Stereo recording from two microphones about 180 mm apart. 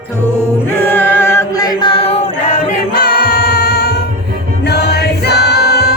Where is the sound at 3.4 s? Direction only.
60° left (ahead or behind).